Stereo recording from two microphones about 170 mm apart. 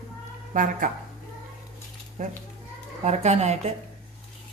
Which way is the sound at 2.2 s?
40° right (ahead or behind).